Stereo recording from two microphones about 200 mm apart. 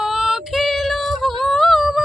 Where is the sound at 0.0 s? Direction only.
5° right (ahead or behind).